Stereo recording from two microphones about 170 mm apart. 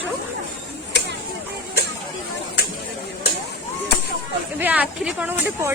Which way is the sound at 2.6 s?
70° left (ahead or behind).